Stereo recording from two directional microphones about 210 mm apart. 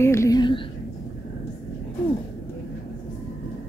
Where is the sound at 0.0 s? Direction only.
15° left (ahead or behind).